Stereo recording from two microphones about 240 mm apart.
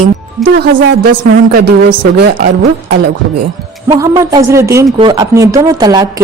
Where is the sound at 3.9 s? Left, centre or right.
Centre.